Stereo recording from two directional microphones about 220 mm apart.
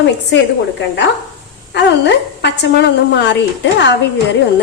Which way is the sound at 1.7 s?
50° left (ahead or behind).